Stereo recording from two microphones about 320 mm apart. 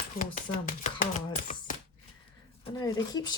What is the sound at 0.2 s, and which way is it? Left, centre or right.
Speech, left.